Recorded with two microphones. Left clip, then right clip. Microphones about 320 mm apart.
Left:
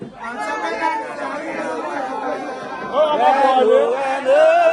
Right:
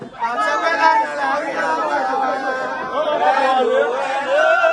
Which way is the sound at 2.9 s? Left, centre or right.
Left.